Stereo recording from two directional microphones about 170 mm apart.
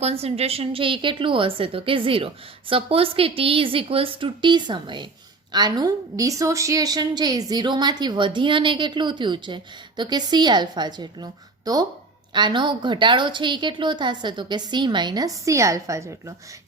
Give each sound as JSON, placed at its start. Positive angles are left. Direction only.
{"t": 0.0, "sound": "a woman's voice", "side_deg": -35}